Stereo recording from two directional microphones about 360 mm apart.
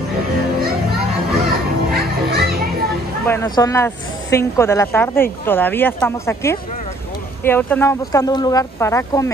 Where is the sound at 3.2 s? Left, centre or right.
Centre.